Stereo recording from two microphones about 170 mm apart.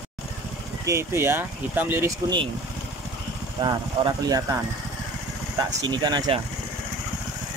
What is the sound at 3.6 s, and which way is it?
Speech, 25° right (ahead or behind).